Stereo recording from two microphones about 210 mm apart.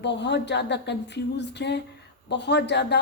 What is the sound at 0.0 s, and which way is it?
A woman's voice, 55° left (ahead or behind).